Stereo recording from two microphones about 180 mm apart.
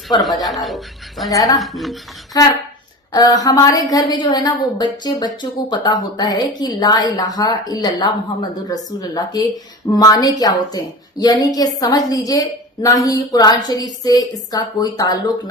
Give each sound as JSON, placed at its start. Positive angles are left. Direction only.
{"t": 0.2, "sound": "speech", "side_deg": 0}
{"t": 1.3, "sound": "a woman's voice", "side_deg": 20}
{"t": 1.5, "sound": "speech", "side_deg": 0}
{"t": 2.3, "sound": "a woman's voice", "side_deg": 20}